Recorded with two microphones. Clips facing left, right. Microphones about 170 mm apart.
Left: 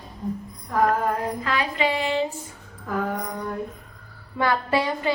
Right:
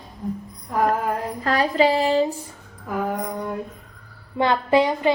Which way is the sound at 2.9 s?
15° right (ahead or behind).